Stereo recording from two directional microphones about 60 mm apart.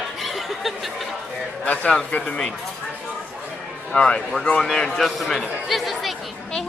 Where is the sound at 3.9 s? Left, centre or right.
Centre.